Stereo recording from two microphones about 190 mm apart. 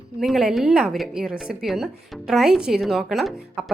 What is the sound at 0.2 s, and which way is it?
A woman's voice, centre (ahead or behind).